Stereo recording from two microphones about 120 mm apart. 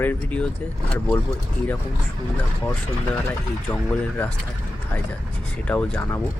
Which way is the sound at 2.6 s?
15° left (ahead or behind).